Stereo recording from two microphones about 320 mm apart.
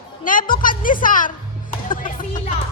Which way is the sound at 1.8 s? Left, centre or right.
Left.